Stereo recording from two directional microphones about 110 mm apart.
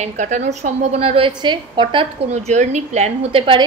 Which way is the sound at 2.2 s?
90° right.